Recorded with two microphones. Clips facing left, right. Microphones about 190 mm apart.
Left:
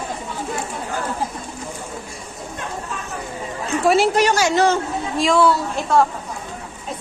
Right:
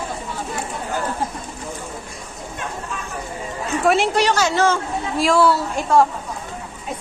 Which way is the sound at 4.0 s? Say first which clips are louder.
Left 2 dB; 45° left (ahead or behind).